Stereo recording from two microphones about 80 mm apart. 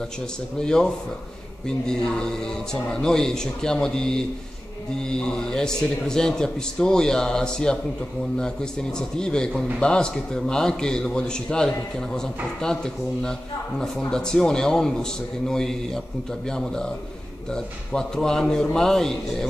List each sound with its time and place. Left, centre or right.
0.6 s a man's voice: centre
8.9 s a man's voice: centre